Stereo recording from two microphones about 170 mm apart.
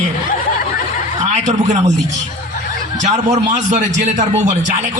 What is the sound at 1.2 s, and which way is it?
Speech, 45° right (ahead or behind).